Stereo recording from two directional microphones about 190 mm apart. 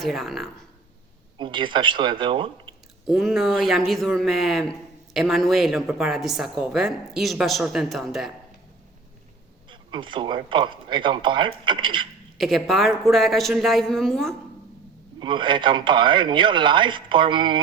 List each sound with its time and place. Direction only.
0.0 s a woman's voice: centre (ahead or behind)
1.4 s speech: 25° right (ahead or behind)
3.1 s a woman's voice: centre (ahead or behind)
9.6 s speech: 25° right (ahead or behind)
12.4 s a woman's voice: centre (ahead or behind)
15.2 s speech: 25° right (ahead or behind)